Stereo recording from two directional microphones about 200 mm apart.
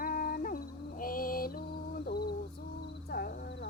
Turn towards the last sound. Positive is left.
turn(degrees=55)  # may be behind; listen again after turning